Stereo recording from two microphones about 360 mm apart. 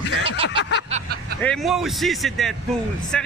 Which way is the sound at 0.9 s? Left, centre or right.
Right.